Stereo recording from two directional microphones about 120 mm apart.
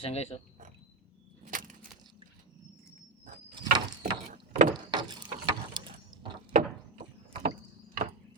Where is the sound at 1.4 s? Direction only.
90° right.